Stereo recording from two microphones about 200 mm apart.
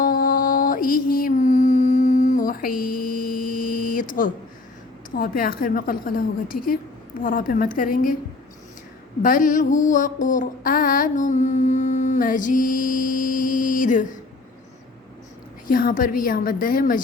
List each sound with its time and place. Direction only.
0.0 s mantra: 45° left (ahead or behind)
5.1 s a woman's voice: 45° left (ahead or behind)
9.2 s mantra: 40° left (ahead or behind)
15.6 s a woman's voice: 45° left (ahead or behind)